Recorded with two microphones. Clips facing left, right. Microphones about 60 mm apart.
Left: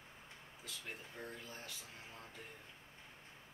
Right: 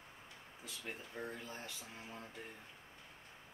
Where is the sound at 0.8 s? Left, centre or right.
Centre.